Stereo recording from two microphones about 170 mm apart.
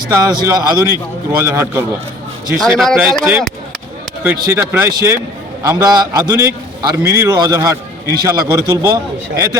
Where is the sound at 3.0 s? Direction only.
10° right (ahead or behind).